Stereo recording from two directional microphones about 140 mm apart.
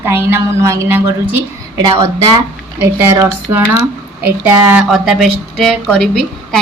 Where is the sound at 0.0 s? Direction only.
15° right (ahead or behind).